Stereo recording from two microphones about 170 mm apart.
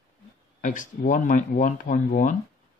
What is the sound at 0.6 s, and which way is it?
Speech, 50° left (ahead or behind).